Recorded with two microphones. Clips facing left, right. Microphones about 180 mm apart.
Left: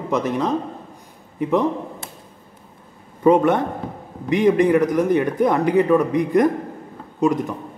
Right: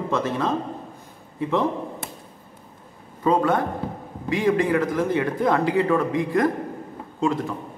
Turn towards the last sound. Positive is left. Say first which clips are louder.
# left 4 dB
turn(degrees=15)  # may be behind; listen again after turning